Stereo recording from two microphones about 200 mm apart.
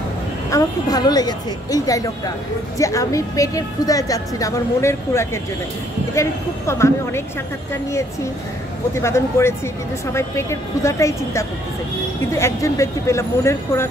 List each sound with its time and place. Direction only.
0.5 s a woman's voice: 20° left (ahead or behind)
8.9 s a woman's voice: 15° left (ahead or behind)